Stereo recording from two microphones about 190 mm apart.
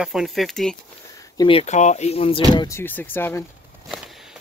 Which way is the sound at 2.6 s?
10° left (ahead or behind).